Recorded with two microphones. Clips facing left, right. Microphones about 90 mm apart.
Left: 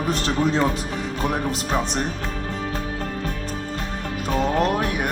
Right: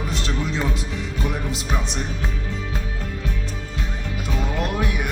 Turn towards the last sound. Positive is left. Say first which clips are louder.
# left 4 dB
turn(degrees=45)  # may be behind; listen again after turning